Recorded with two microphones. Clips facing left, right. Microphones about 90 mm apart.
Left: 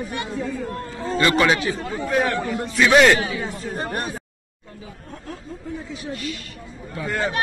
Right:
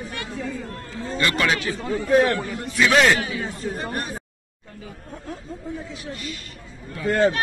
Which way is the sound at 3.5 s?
35° left (ahead or behind).